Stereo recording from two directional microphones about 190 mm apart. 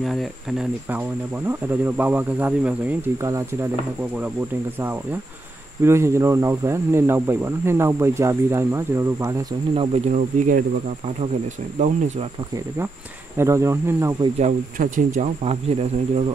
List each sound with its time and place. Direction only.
0.0 s speech: centre (ahead or behind)
5.8 s speech: 15° right (ahead or behind)
9.8 s speech: 35° right (ahead or behind)
13.4 s speech: 15° right (ahead or behind)
14.4 s speech: 45° right (ahead or behind)
15.1 s speech: 35° right (ahead or behind)